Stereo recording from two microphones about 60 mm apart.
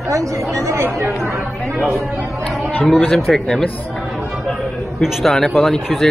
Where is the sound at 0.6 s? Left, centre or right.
Right.